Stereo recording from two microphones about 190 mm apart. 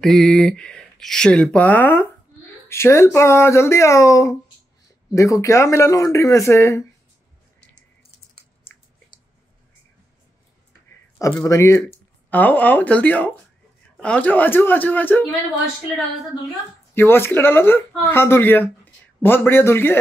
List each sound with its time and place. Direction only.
0.0 s speech: centre (ahead or behind)
11.3 s speech: 15° left (ahead or behind)
16.9 s speech: 10° left (ahead or behind)